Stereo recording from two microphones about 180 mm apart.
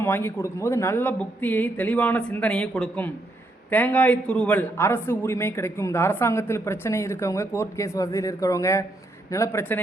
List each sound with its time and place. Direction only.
0.0 s a man's voice: 10° left (ahead or behind)